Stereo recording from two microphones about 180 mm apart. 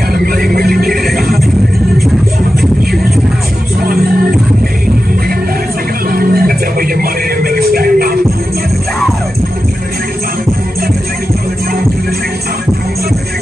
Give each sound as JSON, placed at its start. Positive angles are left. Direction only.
{"t": 0.1, "sound": "music", "side_deg": -55}
{"t": 1.0, "sound": "music", "side_deg": 0}
{"t": 3.8, "sound": "music", "side_deg": -55}
{"t": 6.0, "sound": "music", "side_deg": -55}